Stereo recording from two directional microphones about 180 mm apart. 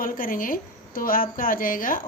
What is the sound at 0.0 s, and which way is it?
Speech, 50° left (ahead or behind).